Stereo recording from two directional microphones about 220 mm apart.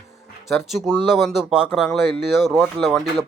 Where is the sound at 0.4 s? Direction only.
Centre (ahead or behind).